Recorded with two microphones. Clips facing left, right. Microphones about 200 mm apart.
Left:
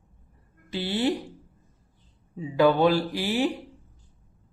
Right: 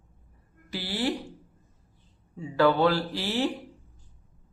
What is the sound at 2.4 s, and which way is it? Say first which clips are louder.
Speech: left 2 dB; 15° left (ahead or behind).